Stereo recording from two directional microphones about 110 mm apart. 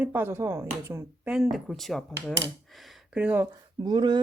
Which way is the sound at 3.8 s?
40° right (ahead or behind).